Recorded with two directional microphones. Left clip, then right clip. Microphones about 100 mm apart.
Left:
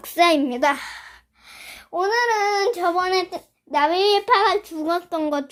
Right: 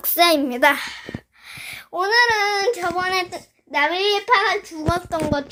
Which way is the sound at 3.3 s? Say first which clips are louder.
Left 2 dB; 45° left (ahead or behind).